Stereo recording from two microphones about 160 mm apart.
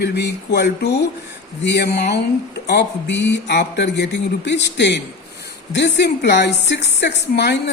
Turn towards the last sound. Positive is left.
turn(degrees=90)